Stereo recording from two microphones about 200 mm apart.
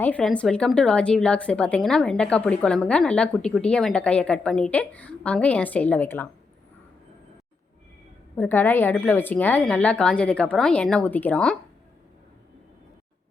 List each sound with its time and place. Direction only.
0.0 s a woman's voice: 5° left (ahead or behind)
8.4 s speech: 10° left (ahead or behind)